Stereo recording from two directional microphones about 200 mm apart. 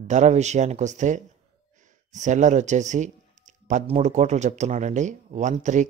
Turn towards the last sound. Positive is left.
turn(degrees=-35)  # may be behind; listen again after turning